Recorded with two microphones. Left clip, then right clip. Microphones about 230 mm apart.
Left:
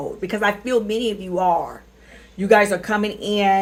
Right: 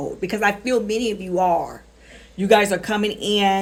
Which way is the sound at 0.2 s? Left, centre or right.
Right.